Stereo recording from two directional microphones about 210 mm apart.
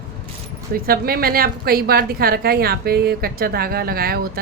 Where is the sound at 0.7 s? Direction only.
45° right (ahead or behind).